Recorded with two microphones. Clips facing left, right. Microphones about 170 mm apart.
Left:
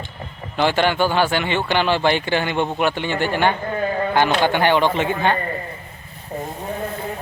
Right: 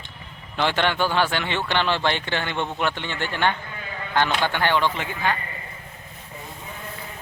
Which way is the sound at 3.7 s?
50° left (ahead or behind).